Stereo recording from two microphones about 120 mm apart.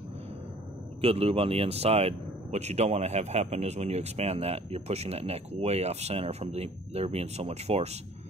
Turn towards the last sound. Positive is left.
turn(degrees=-65)  # may be behind; listen again after turning